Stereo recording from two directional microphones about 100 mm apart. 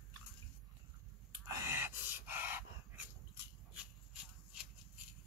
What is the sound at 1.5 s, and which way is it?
Dog, 25° right (ahead or behind).